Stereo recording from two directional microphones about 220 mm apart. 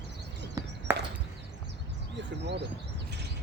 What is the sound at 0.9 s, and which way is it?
Chop, 10° right (ahead or behind).